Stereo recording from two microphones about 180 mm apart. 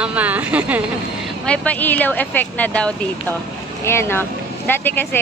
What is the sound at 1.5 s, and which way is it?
Speech, 10° left (ahead or behind).